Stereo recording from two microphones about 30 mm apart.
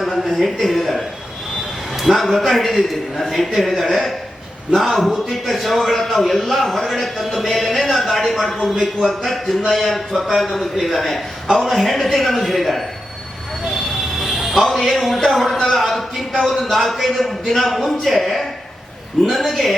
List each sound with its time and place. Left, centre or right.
0.0 s a man's voice: centre
10.8 s a man's voice: centre
11.4 s a man's voice: right
11.7 s a man's voice: centre
14.3 s a sound: centre
14.6 s a man's voice: centre